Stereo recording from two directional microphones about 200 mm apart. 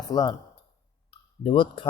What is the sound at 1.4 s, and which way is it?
Speech, 25° left (ahead or behind).